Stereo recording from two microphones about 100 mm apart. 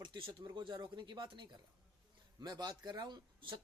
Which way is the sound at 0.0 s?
50° right (ahead or behind).